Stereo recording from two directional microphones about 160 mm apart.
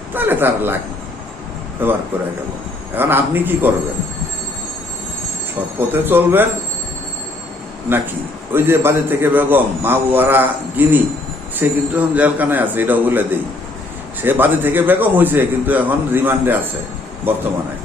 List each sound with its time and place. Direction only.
0.1 s a man's voice: 10° right (ahead or behind)
1.8 s a man's voice: 15° right (ahead or behind)
5.9 s a man's voice: 10° right (ahead or behind)
8.5 s a man's voice: 15° right (ahead or behind)